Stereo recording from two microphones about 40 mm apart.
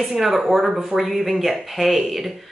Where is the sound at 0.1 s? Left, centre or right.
Centre.